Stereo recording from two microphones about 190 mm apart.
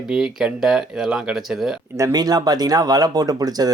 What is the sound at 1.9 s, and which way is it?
Speech, 15° right (ahead or behind).